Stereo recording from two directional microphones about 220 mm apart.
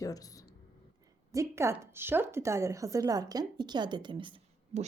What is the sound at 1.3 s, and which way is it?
A woman's voice, 15° right (ahead or behind).